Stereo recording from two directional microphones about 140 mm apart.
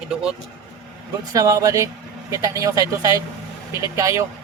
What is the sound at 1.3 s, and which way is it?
Speech, 20° right (ahead or behind).